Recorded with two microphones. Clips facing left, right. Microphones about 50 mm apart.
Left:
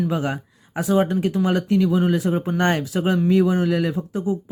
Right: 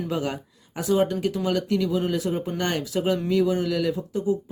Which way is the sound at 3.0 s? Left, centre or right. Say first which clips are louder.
Left 2 dB; left.